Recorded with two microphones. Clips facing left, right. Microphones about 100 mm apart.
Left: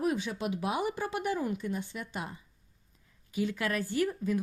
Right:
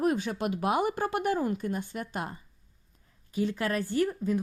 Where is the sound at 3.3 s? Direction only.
35° right (ahead or behind).